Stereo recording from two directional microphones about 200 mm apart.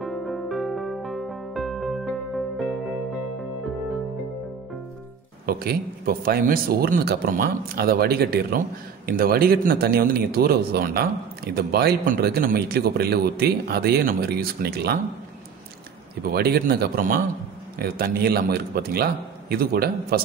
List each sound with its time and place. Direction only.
0.0 s music: centre (ahead or behind)
5.5 s speech: 50° right (ahead or behind)
16.3 s speech: 50° right (ahead or behind)